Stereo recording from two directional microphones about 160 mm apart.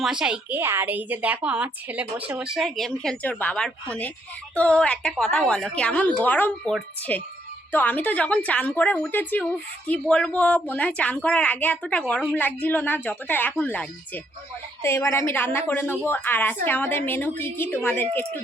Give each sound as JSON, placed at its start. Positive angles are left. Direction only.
{"t": 0.0, "sound": "a woman's voice", "side_deg": -5}